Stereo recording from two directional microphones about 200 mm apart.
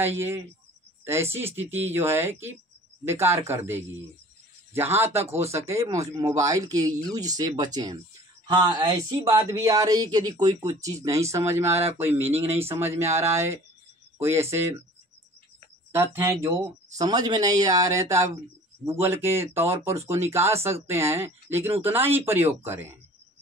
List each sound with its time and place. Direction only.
0.0 s speech: 10° right (ahead or behind)
15.9 s speech: 10° right (ahead or behind)